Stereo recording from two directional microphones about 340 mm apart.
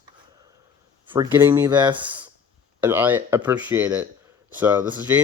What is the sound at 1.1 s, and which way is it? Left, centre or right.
Speech, centre.